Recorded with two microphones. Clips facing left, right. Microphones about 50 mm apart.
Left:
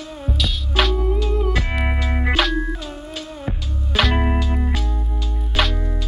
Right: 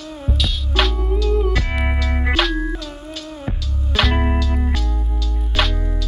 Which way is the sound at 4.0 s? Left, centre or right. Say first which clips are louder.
Even; centre.